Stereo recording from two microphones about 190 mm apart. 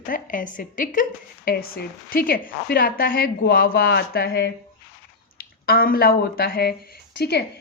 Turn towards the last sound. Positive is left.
turn(degrees=60)  # may be behind; listen again after turning